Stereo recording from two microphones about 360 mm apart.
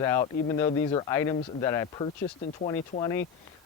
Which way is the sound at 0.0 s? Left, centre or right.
Centre.